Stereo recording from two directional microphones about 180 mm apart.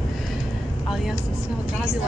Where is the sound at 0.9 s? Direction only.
Centre (ahead or behind).